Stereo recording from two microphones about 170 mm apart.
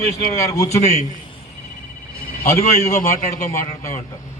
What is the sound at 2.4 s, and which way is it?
Speech, 15° left (ahead or behind).